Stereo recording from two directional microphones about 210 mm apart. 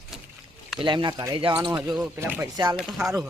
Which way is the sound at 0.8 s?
25° right (ahead or behind).